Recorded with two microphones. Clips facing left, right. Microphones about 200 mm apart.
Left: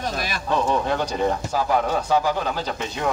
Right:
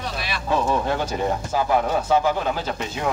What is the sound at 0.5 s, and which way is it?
Speech, 5° right (ahead or behind).